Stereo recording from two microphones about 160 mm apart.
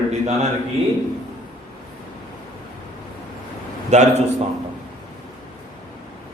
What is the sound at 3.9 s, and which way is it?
Speech, 45° right (ahead or behind).